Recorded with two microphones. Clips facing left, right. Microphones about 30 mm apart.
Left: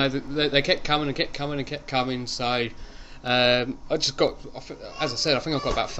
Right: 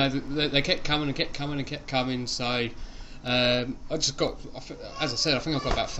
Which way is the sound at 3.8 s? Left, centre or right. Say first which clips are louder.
Left 5 dB; left.